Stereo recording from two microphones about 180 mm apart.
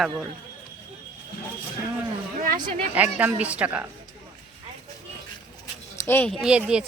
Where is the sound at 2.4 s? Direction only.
45° right (ahead or behind).